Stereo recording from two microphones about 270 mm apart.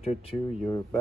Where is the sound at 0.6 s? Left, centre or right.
Centre.